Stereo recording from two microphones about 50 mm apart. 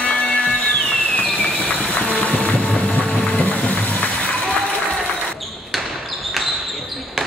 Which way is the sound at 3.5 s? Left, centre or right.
Left.